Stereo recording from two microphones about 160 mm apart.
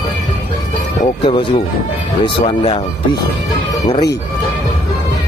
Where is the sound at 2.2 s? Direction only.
35° left (ahead or behind).